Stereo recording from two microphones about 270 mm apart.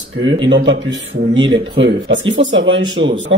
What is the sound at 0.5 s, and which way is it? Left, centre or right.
A man's voice, right.